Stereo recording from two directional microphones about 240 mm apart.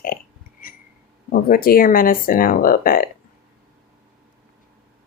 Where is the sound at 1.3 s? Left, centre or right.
Left.